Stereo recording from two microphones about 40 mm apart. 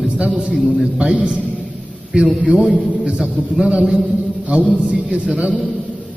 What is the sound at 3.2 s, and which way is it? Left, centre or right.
A man's voice, right.